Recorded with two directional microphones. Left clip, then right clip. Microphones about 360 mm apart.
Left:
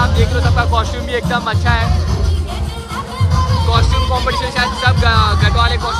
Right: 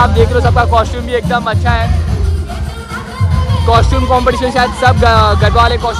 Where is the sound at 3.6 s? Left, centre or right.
Centre.